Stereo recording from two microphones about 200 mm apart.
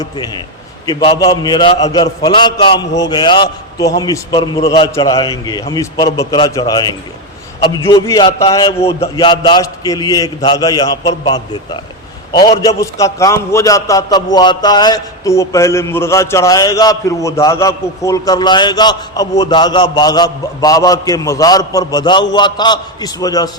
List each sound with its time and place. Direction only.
0.0 s a man's voice: 20° left (ahead or behind)